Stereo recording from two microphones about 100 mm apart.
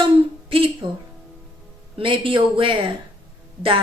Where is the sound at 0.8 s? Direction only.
55° right (ahead or behind).